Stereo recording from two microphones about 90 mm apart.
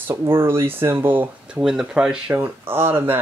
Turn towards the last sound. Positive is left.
turn(degrees=-25)  # may be behind; listen again after turning